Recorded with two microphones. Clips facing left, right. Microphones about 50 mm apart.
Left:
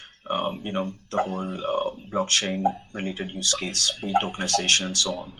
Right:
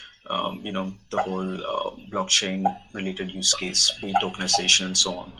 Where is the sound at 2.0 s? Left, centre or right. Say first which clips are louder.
Even; centre.